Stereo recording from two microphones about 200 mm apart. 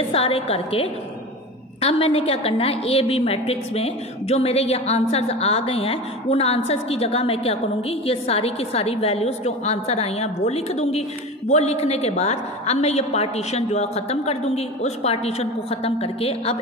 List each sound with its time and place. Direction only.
0.1 s a woman's voice: 30° left (ahead or behind)